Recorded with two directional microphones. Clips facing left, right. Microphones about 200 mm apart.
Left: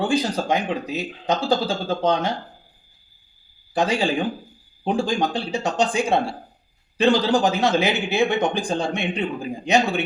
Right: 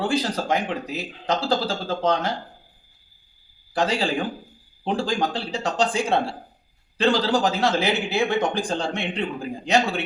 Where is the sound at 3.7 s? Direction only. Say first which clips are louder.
Left 2 dB; 15° left (ahead or behind).